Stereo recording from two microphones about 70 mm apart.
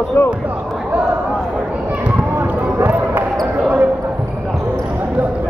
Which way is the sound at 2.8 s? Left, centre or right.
Right.